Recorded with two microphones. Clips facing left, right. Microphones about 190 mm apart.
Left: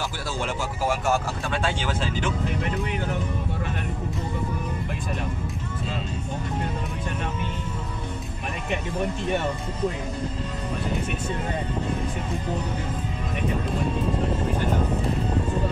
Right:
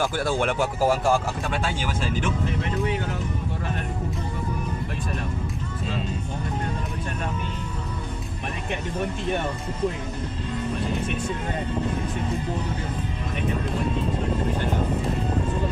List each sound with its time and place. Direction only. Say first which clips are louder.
0.0 s speech: right 6 dB; 55° right (ahead or behind)
0.7 s speech: right 2 dB; 35° right (ahead or behind)